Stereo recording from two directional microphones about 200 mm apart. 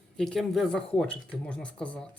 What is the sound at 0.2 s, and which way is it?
Speech, centre (ahead or behind).